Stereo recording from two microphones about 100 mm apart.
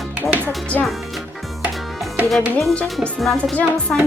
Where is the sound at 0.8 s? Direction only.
15° left (ahead or behind).